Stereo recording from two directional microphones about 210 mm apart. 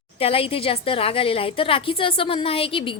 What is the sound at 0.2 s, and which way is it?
A woman's voice, 25° left (ahead or behind).